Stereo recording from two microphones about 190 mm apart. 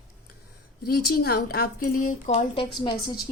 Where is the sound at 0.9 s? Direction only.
55° left (ahead or behind).